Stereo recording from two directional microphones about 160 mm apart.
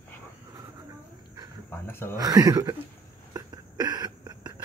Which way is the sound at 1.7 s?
15° left (ahead or behind).